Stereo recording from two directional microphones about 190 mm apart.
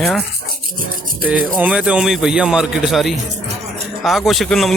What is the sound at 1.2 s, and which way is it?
A man's voice, 5° right (ahead or behind).